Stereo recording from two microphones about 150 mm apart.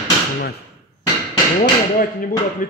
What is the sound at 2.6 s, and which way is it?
Speech, 65° left (ahead or behind).